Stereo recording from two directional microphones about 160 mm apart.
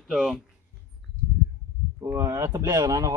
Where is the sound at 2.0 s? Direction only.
15° right (ahead or behind).